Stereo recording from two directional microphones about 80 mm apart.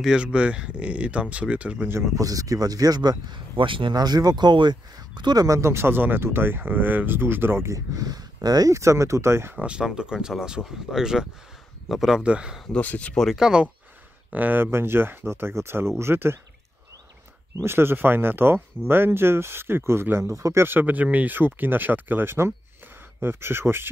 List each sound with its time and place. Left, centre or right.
0.0 s speech: centre
1.9 s speech: right
2.2 s speech: right
3.9 s speech: right
5.6 s speech: right
9.6 s speech: centre
12.2 s speech: centre
12.7 s speech: centre
13.1 s speech: centre
13.4 s speech: centre
14.3 s speech: right
17.6 s speech: right